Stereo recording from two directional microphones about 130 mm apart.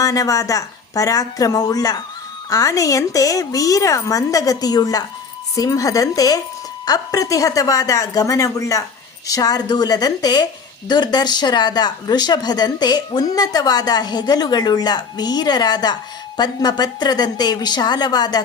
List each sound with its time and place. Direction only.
0.0 s a woman's voice: 25° left (ahead or behind)